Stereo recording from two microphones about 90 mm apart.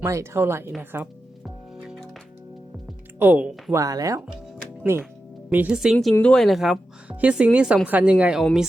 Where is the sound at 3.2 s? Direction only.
15° right (ahead or behind).